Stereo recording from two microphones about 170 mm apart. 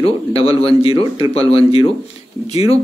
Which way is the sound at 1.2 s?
20° right (ahead or behind).